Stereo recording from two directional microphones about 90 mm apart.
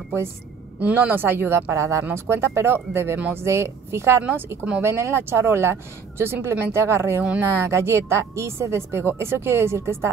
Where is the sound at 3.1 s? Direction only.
15° right (ahead or behind).